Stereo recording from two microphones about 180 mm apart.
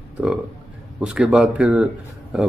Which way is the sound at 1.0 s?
5° right (ahead or behind).